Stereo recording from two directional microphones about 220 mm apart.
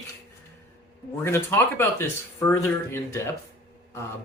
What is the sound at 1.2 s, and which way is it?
Speech, 10° left (ahead or behind).